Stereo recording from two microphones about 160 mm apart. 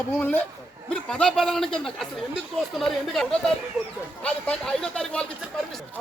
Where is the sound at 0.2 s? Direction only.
10° left (ahead or behind).